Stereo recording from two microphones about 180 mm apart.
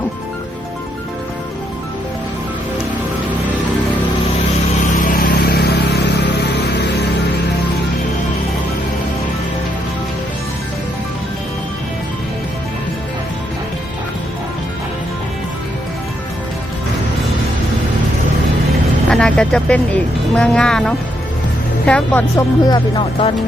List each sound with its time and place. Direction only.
4.9 s music: 55° left (ahead or behind)
19.1 s speech: 5° left (ahead or behind)
22.6 s speech: 25° left (ahead or behind)